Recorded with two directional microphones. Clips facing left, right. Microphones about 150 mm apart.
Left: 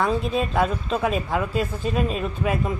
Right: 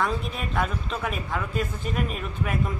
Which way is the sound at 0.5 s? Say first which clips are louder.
Left 5 dB; 20° left (ahead or behind).